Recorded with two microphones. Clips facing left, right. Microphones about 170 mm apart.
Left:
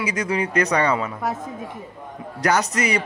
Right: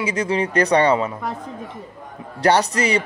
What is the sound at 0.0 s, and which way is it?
Speech, 30° right (ahead or behind).